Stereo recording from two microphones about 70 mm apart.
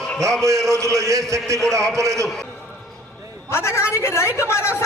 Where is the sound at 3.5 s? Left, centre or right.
Left.